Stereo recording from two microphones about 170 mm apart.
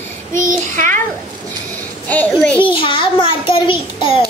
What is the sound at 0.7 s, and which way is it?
Speech, 15° left (ahead or behind).